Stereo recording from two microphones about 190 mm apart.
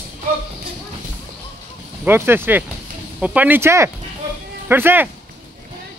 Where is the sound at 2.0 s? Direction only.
10° right (ahead or behind).